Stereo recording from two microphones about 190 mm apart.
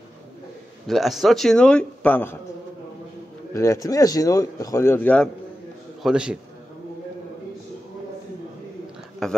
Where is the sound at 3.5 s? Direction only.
15° left (ahead or behind).